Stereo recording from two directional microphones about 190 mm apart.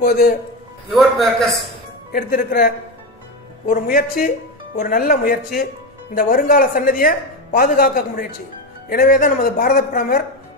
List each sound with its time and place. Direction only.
0.0 s a woman's voice: 55° left (ahead or behind)
0.9 s a man's voice: centre (ahead or behind)
2.1 s a woman's voice: 50° left (ahead or behind)